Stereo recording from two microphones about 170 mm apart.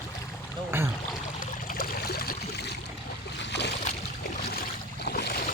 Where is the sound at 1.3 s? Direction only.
60° left (ahead or behind); by 2.8 s 75° left (ahead or behind).